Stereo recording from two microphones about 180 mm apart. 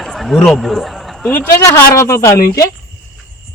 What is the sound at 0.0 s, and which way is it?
A man's voice, centre (ahead or behind).